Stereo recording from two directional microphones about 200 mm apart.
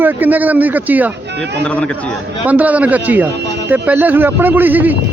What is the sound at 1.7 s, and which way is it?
Speech, 5° left (ahead or behind).